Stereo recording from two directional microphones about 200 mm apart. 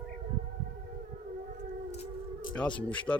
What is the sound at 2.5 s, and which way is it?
Speech, 5° left (ahead or behind).